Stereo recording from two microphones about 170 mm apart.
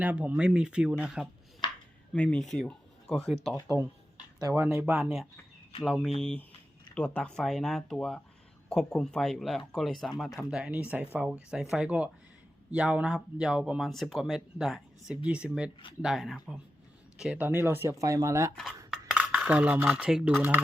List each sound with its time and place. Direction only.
0.0 s speech: 10° right (ahead or behind)
1.6 s a sound: 25° left (ahead or behind)
2.1 s speech: 5° left (ahead or behind)
4.4 s speech: 15° right (ahead or behind)
4.9 s speech: centre (ahead or behind); by 18.5 s 15° right (ahead or behind)
18.9 s cutlery: 5° right (ahead or behind)